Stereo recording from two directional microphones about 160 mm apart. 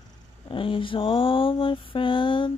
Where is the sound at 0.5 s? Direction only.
35° left (ahead or behind).